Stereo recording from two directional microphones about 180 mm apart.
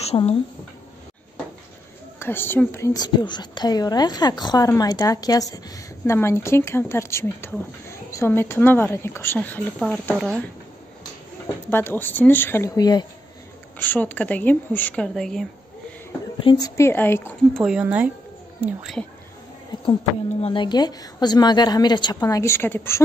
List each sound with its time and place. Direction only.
0.0 s speech: 35° left (ahead or behind)
2.1 s a woman's voice: 10° left (ahead or behind)
11.4 s speech: 10° left (ahead or behind)
13.7 s speech: 10° left (ahead or behind)
16.4 s speech: 20° left (ahead or behind)
17.6 s speech: 5° right (ahead or behind)
20.4 s a woman's voice: 25° left (ahead or behind)